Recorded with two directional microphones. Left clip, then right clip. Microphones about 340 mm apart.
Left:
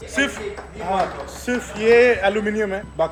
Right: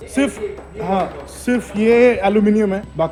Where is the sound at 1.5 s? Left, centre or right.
Centre.